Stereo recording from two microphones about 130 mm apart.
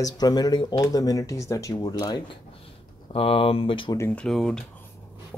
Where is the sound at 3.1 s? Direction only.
45° left (ahead or behind).